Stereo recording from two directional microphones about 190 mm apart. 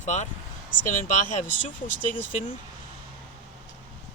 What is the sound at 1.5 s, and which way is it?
Speech, 45° left (ahead or behind).